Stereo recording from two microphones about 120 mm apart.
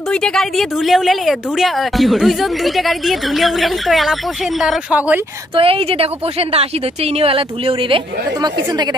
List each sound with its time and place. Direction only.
0.1 s speech: 5° left (ahead or behind)
4.9 s speech: 10° right (ahead or behind)
5.6 s a woman's voice: 50° right (ahead or behind)
7.2 s a woman's voice: 50° right (ahead or behind)